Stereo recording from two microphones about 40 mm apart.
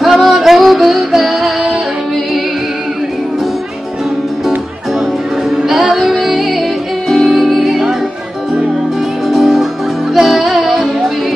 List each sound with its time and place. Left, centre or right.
0.0 s music: centre
5.7 s music: centre
9.3 s music: centre